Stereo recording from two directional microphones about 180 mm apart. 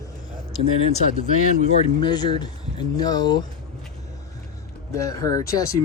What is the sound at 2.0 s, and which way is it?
Speech, 25° left (ahead or behind).